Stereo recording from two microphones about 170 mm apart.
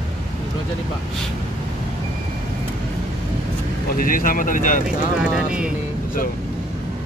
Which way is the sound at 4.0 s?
55° left (ahead or behind).